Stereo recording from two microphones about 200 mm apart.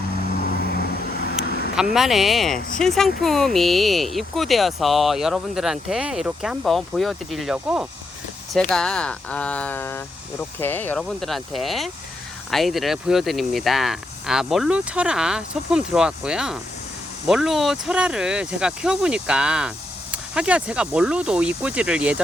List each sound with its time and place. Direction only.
0.6 s vehicle: 50° left (ahead or behind)
1.7 s speech: centre (ahead or behind)